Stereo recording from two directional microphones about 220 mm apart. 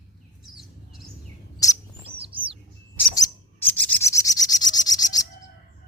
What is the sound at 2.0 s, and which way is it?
Bird, 25° right (ahead or behind).